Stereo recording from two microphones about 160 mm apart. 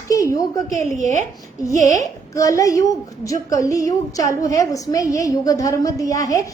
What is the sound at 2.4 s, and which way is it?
A woman's voice, 20° left (ahead or behind).